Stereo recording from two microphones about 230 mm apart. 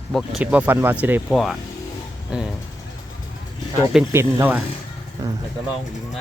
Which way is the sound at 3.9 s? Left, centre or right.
Centre.